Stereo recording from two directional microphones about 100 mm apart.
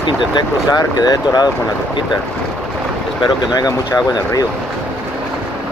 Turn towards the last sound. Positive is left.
turn(degrees=40)  # may be behind; listen again after turning